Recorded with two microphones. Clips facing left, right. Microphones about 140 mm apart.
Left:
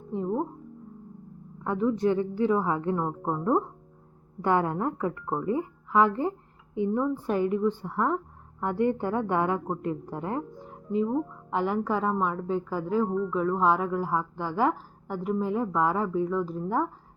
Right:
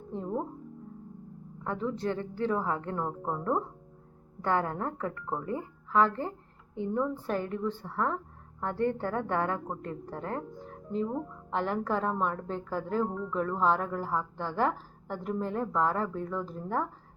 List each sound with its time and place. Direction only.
1.6 s a woman's voice: 15° left (ahead or behind)